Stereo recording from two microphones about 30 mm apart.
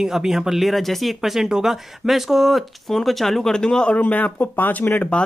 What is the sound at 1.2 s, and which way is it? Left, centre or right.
Speech, centre.